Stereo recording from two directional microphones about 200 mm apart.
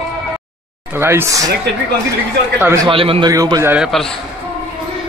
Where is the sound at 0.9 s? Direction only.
10° right (ahead or behind).